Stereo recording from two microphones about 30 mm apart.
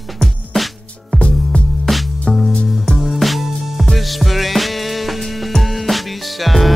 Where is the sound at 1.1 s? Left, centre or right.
Left.